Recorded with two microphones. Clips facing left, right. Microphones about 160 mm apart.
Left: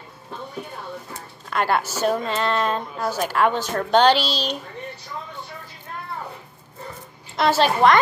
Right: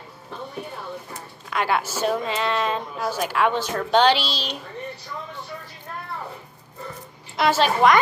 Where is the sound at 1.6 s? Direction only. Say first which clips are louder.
Left 2 dB; 40° left (ahead or behind).